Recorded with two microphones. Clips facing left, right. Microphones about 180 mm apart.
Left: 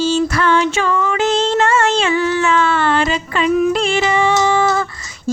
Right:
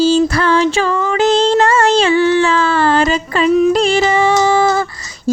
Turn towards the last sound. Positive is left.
turn(degrees=-35)  # may be behind; listen again after turning